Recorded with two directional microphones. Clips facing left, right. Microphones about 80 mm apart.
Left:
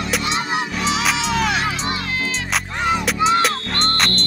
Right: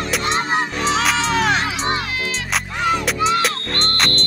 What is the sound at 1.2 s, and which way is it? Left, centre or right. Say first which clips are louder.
Music: right 2 dB; right.